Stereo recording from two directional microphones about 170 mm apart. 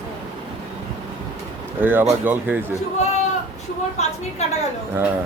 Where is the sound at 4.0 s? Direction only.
40° left (ahead or behind).